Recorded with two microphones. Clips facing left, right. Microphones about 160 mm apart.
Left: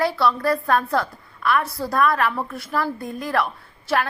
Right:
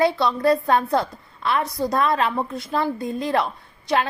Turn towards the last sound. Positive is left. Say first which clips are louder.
# right 1 dB
turn(degrees=-20)  # may be behind; listen again after turning